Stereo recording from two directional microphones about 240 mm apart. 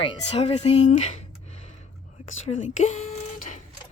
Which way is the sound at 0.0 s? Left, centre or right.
Left.